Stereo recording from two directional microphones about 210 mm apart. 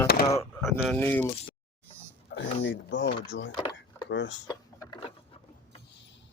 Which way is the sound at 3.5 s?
20° left (ahead or behind).